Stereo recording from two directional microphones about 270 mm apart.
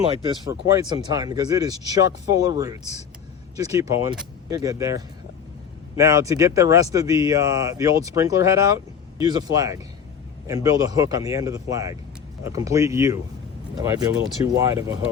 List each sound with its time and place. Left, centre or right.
0.1 s speech: centre
3.8 s speech: centre